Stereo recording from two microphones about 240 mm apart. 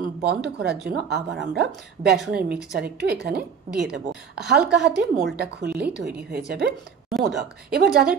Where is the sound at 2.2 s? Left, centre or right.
Centre.